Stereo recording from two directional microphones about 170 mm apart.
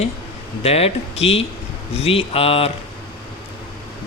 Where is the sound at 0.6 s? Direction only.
35° left (ahead or behind).